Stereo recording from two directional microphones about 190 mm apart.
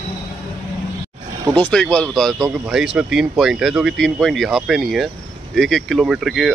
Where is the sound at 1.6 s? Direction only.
5° left (ahead or behind).